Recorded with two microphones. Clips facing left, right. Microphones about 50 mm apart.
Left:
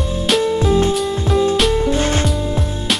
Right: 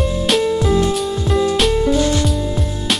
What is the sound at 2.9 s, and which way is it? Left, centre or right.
Music, centre.